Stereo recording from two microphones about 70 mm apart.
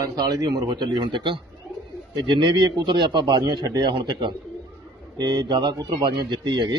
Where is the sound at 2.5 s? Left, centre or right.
Right.